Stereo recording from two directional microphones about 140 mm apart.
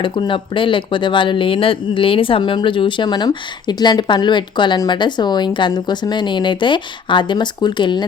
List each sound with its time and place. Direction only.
0.0 s speech: 35° left (ahead or behind)